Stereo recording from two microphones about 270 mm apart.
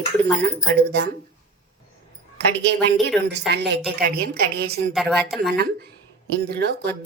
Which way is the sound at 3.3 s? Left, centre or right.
Right.